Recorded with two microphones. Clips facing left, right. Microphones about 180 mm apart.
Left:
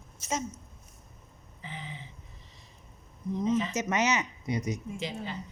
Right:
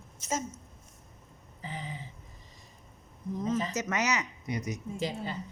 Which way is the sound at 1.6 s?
40° right (ahead or behind).